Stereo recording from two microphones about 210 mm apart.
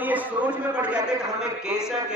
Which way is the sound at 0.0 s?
10° right (ahead or behind).